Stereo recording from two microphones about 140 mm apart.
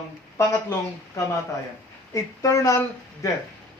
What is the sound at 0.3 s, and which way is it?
A man's voice, 20° left (ahead or behind).